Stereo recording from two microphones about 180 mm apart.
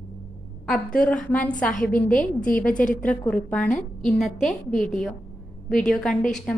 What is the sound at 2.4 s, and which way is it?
Speech, 50° left (ahead or behind).